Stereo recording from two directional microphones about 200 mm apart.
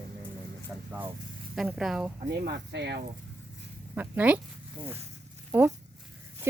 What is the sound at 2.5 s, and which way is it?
Speech, 55° right (ahead or behind).